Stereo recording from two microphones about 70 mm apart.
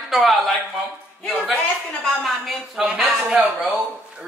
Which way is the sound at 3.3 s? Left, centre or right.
Centre.